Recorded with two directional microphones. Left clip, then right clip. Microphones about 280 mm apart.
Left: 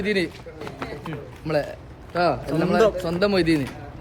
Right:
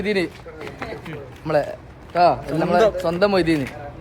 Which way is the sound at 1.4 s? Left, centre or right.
Centre.